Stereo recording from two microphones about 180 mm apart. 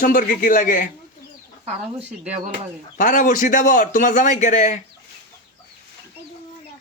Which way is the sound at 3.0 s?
45° left (ahead or behind).